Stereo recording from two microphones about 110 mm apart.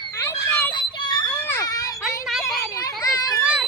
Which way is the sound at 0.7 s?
45° left (ahead or behind).